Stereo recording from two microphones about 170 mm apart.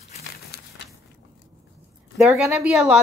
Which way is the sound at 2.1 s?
Centre (ahead or behind).